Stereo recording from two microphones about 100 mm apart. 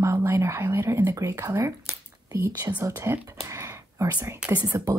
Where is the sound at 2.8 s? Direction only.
35° right (ahead or behind).